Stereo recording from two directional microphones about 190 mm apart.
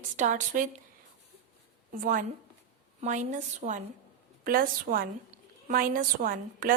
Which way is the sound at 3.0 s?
40° right (ahead or behind).